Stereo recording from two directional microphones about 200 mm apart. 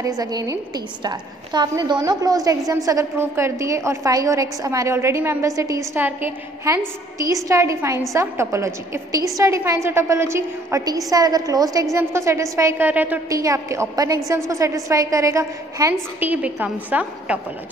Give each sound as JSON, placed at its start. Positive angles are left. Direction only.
{"t": 0.2, "sound": "a woman's voice", "side_deg": -20}